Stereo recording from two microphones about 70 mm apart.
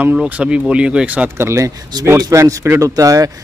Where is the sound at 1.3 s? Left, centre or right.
Right.